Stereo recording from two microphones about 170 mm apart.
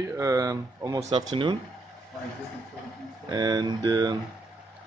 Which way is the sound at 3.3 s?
25° right (ahead or behind).